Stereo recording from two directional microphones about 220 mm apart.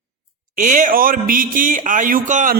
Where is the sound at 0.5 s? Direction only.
35° right (ahead or behind).